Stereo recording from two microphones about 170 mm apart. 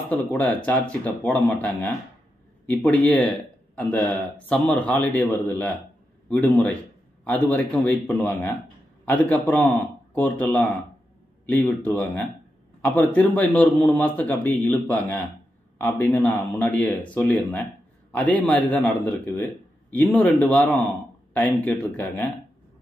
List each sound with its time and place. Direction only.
0.1 s a man's voice: 10° left (ahead or behind)